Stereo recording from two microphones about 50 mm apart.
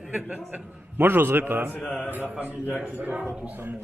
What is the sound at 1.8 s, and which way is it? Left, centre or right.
Speech, centre.